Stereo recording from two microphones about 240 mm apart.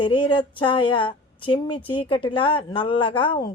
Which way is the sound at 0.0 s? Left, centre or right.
Centre.